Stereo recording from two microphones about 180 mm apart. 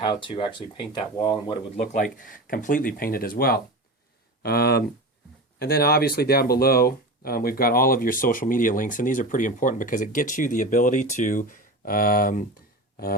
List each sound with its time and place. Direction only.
0.0 s speech: 25° left (ahead or behind)
1.9 s speech: 50° left (ahead or behind)